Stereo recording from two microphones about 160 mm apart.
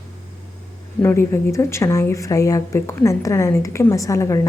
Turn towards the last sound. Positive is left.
turn(degrees=20)  # may be behind; listen again after turning